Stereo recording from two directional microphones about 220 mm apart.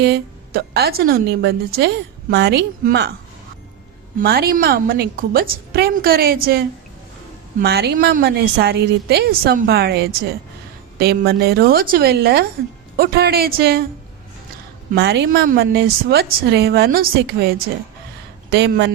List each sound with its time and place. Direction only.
0.0 s a woman's voice: 50° right (ahead or behind)
4.2 s a woman's voice: 45° right (ahead or behind)
14.9 s a woman's voice: 50° right (ahead or behind)
18.5 s a woman's voice: 50° right (ahead or behind)